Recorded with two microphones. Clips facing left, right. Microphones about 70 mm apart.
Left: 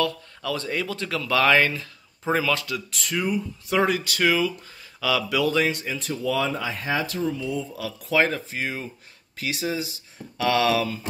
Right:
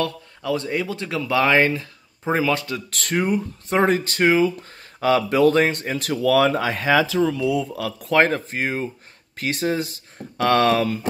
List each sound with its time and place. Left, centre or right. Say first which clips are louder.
0.4 s speech: right 4 dB; centre
2.9 s speech: right 5 dB; right
5.9 s speech: right 12 dB; right